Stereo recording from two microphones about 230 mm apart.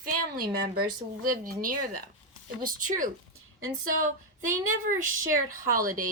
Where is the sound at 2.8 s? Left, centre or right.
Right.